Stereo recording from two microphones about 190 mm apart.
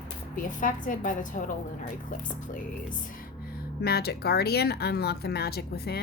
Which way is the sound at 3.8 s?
55° left (ahead or behind).